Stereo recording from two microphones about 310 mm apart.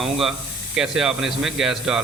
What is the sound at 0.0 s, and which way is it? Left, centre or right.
Speech, centre.